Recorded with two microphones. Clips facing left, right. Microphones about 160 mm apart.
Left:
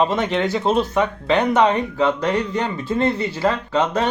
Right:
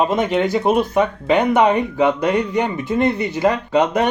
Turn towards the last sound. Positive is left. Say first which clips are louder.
# right 3 dB
turn(degrees=-15)  # may be behind; listen again after turning